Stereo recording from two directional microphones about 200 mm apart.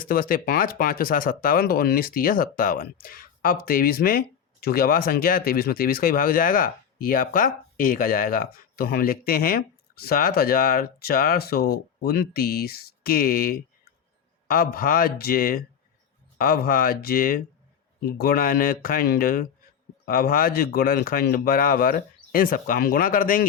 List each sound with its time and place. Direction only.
0.0 s speech: 45° left (ahead or behind)